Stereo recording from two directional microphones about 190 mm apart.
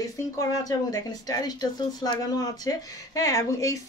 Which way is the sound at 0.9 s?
20° left (ahead or behind).